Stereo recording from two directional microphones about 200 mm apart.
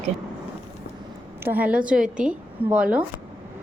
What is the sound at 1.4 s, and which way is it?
A woman's voice, 10° right (ahead or behind).